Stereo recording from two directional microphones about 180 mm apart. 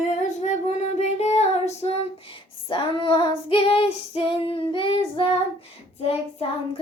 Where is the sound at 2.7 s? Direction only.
25° left (ahead or behind).